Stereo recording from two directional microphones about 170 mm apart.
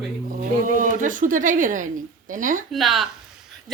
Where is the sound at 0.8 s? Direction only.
50° right (ahead or behind).